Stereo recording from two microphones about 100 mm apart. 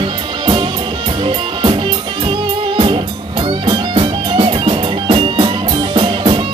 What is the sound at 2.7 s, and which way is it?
Music, 65° right (ahead or behind).